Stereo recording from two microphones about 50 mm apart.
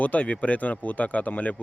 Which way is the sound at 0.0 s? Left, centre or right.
Left.